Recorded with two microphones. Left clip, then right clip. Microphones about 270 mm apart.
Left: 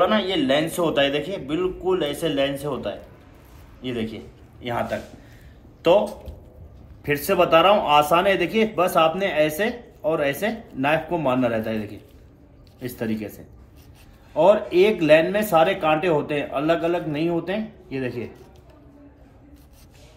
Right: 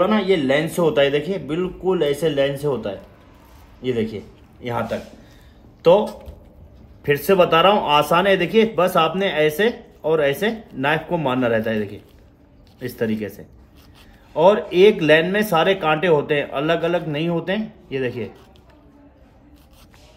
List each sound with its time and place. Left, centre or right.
0.5 s speech: right
7.2 s speech: right
14.3 s speech: right